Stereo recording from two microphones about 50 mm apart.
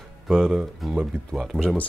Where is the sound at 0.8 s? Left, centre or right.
Centre.